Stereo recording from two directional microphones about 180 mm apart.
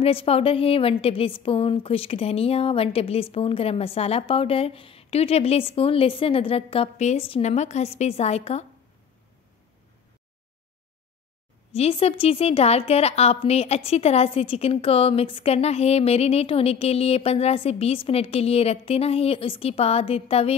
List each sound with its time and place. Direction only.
0.0 s a woman's voice: 30° left (ahead or behind)
11.7 s a woman's voice: 35° left (ahead or behind)